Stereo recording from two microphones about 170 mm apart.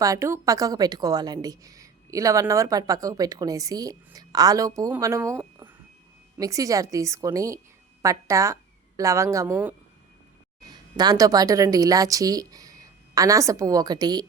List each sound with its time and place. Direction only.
0.0 s a woman's voice: 20° right (ahead or behind)
10.6 s a woman's voice: 25° right (ahead or behind)